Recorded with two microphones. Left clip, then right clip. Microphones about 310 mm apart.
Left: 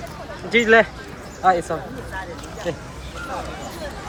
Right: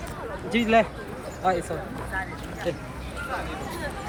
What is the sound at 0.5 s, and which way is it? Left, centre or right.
Speech, left.